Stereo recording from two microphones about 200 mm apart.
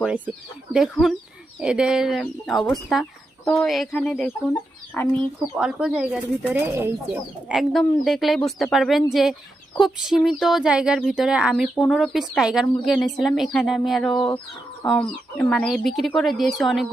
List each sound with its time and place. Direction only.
0.7 s speech: centre (ahead or behind)
5.5 s speech: 5° right (ahead or behind)